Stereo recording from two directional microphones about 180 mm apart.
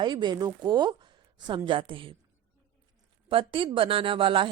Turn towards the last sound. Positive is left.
turn(degrees=-30)  # may be behind; listen again after turning